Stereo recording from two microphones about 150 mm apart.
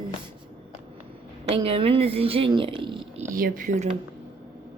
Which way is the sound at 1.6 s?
40° right (ahead or behind).